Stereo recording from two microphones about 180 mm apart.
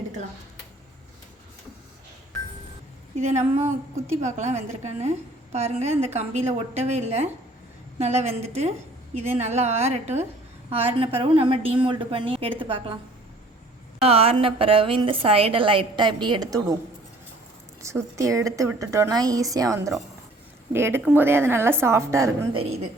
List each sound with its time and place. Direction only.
3.2 s a woman's voice: 40° right (ahead or behind)
14.0 s a woman's voice: 35° right (ahead or behind)
17.8 s a woman's voice: 15° right (ahead or behind)